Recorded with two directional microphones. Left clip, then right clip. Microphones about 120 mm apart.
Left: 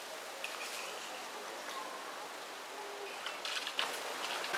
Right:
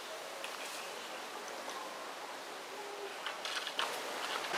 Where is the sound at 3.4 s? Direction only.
5° right (ahead or behind).